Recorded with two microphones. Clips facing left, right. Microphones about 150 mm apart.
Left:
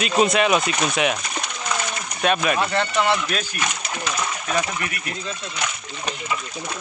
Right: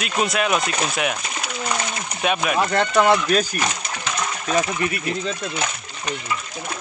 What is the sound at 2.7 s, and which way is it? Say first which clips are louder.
Speech: right 4 dB; 45° right (ahead or behind).